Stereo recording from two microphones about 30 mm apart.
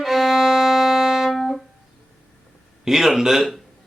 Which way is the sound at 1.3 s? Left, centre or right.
Centre.